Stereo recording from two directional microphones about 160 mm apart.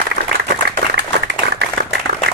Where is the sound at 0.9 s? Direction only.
90° right.